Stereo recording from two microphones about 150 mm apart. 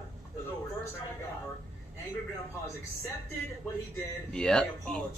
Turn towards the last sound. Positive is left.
turn(degrees=5)  # may be behind; listen again after turning